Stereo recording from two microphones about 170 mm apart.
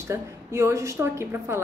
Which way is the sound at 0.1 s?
15° right (ahead or behind).